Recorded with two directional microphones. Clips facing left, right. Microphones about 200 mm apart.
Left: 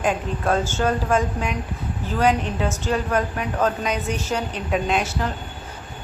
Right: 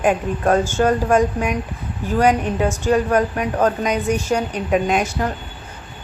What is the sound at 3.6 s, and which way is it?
A woman's voice, 45° right (ahead or behind).